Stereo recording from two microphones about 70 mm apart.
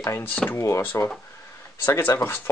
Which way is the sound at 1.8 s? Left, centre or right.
Left.